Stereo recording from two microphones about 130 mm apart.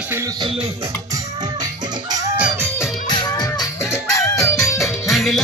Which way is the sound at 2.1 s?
30° right (ahead or behind).